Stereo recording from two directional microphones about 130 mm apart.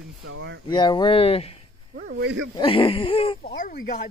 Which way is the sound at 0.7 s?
35° left (ahead or behind).